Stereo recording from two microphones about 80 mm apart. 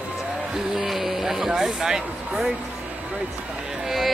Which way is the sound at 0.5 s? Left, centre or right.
Centre.